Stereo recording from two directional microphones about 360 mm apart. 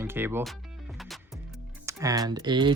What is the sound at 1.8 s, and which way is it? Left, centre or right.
Speech, centre.